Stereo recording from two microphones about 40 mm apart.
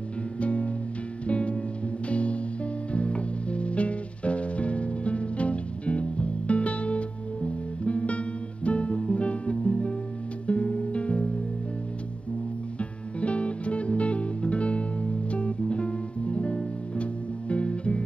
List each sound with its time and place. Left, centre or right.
0.4 s music: left
12.7 s music: left